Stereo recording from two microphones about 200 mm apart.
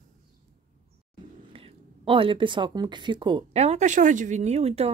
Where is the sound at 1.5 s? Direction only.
25° right (ahead or behind).